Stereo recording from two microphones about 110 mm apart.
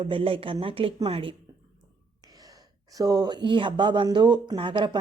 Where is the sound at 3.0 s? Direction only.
40° right (ahead or behind).